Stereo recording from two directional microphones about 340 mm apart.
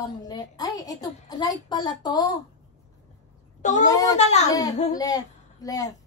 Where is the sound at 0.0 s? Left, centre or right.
Centre.